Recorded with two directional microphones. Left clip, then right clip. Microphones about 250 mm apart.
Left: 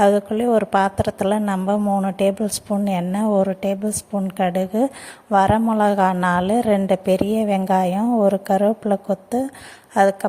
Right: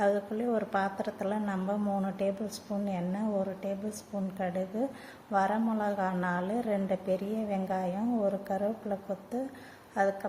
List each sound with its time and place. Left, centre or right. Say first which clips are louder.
0.0 s a woman's voice: left 12 dB; left